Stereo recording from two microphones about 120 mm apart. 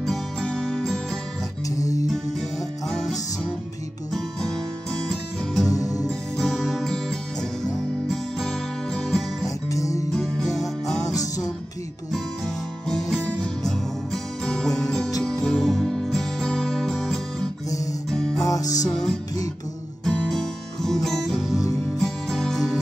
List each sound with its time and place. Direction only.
0.0 s music: 5° left (ahead or behind)
1.8 s music: 30° left (ahead or behind)
2.9 s music: 5° left (ahead or behind)
5.7 s music: 30° left (ahead or behind)
6.0 s music: centre (ahead or behind)
9.7 s music: 25° left (ahead or behind)
10.1 s music: centre (ahead or behind)
11.1 s music: 30° left (ahead or behind)
12.8 s music: 5° left (ahead or behind)
18.4 s music: 30° left (ahead or behind)
18.9 s music: 5° left (ahead or behind)